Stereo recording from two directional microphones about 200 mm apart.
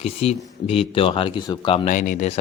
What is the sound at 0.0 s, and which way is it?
Speech, 30° left (ahead or behind).